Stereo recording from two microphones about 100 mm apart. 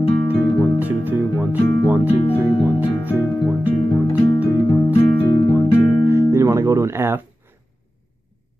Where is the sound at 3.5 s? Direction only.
15° right (ahead or behind).